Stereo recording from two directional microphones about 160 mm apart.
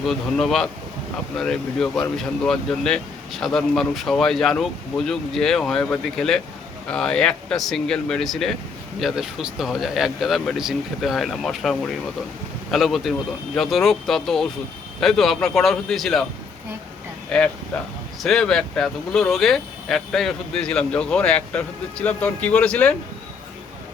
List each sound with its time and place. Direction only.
0.0 s speech: 5° left (ahead or behind)
17.2 s speech: 5° left (ahead or behind)